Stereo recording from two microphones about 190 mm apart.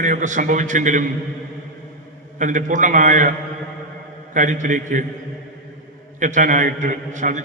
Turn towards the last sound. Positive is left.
turn(degrees=-40)  # may be behind; listen again after turning